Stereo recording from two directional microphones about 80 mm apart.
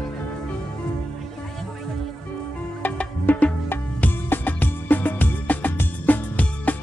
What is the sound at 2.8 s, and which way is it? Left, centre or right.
Music, left.